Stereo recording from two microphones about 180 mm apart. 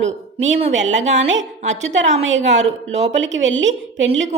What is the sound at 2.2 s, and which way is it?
Speech, 90° right.